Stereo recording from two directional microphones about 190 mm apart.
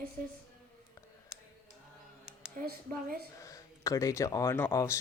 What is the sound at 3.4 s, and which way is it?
Speech, 15° left (ahead or behind).